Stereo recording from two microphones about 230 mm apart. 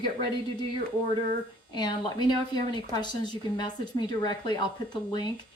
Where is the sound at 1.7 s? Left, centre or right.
Centre.